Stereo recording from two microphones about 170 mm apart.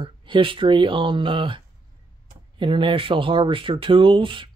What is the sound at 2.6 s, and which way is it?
Speech, 30° right (ahead or behind).